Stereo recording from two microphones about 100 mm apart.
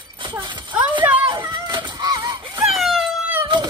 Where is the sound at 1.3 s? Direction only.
50° right (ahead or behind).